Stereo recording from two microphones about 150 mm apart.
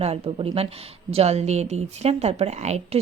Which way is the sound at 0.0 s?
40° right (ahead or behind).